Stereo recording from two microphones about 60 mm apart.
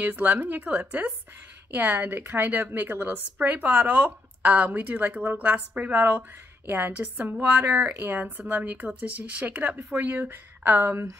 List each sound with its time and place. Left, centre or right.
0.0 s a woman's voice: right